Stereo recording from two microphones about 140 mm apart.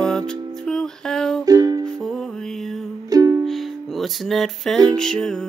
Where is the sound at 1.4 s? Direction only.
25° right (ahead or behind).